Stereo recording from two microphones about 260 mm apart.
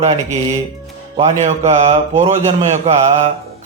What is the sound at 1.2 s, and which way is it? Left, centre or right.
A man's voice, right.